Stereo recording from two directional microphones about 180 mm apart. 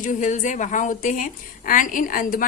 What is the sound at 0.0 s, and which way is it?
Speech, 45° left (ahead or behind).